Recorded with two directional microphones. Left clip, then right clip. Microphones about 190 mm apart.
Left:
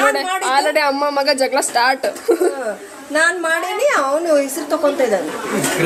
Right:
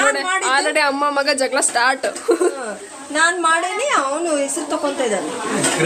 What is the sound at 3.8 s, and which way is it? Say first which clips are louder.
Speech: left 3 dB; centre (ahead or behind).